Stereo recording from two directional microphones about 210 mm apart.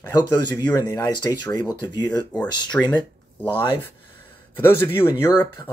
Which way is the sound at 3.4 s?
25° left (ahead or behind).